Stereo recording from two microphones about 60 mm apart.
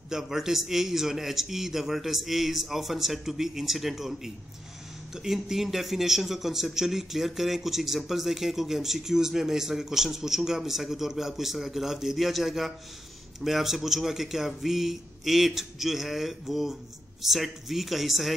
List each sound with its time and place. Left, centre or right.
0.1 s speech: centre